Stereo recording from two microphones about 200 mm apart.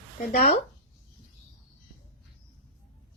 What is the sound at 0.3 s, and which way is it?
Speech, 30° left (ahead or behind).